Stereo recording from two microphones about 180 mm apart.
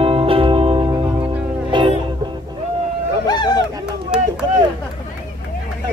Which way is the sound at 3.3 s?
25° left (ahead or behind).